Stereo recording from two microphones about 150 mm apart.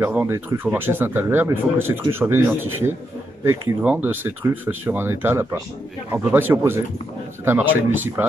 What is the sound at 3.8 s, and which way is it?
Speech, 10° right (ahead or behind).